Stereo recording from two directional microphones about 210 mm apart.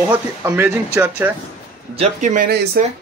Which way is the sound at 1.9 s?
35° right (ahead or behind).